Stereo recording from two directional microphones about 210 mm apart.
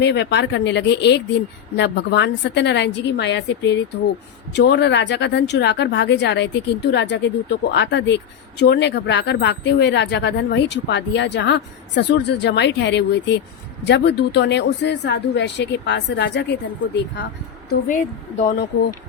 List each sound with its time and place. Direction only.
0.0 s speech: 55° left (ahead or behind)
17.7 s a woman's voice: 40° left (ahead or behind)